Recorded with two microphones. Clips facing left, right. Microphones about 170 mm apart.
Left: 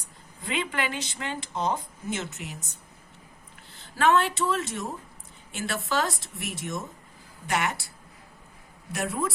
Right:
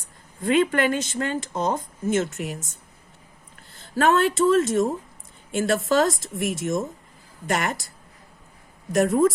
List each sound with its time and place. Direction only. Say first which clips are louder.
0.4 s speech: right 10 dB; 45° right (ahead or behind)
3.9 s speech: right 3 dB; 45° right (ahead or behind)
8.9 s speech: right 11 dB; 45° right (ahead or behind)